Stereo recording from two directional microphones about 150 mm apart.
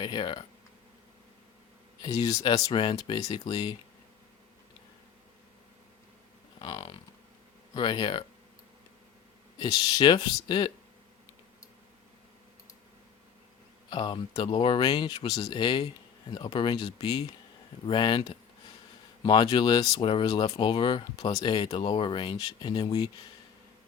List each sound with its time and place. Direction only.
0.0 s speech: 30° left (ahead or behind)
2.0 s speech: 25° left (ahead or behind)
6.6 s speech: 30° left (ahead or behind)
9.6 s speech: 30° left (ahead or behind)
13.9 s speech: 30° left (ahead or behind)